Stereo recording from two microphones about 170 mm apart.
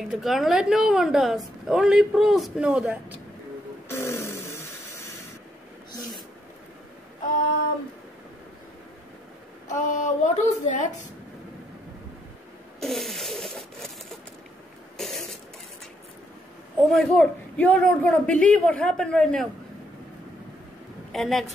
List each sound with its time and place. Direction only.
0.1 s a woman's voice: centre (ahead or behind)
3.9 s a sound: 15° left (ahead or behind)
9.7 s speech: 45° left (ahead or behind)
12.8 s rub: centre (ahead or behind)
15.0 s a sound: centre (ahead or behind)
16.9 s a man's voice: 5° left (ahead or behind)
21.1 s a woman's voice: centre (ahead or behind)